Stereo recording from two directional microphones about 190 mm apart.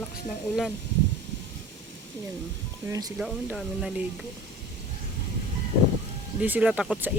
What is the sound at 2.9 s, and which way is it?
Speech, 20° right (ahead or behind).